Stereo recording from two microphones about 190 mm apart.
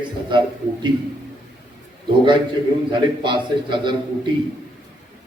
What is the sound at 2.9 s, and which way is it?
A man's voice, 25° right (ahead or behind).